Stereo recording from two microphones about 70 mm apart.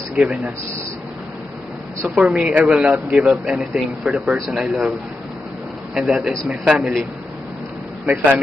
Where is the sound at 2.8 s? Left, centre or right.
Centre.